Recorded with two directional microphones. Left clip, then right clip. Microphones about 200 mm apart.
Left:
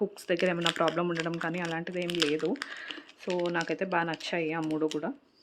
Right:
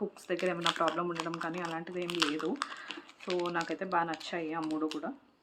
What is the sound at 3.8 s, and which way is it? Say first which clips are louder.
Speech: left 2 dB; 40° left (ahead or behind).